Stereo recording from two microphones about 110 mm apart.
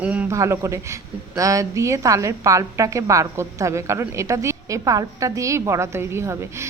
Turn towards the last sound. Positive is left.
turn(degrees=-25)  # may be behind; listen again after turning